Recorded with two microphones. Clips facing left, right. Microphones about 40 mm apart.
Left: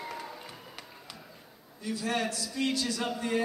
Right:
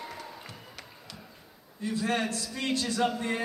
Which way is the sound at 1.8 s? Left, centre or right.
Right.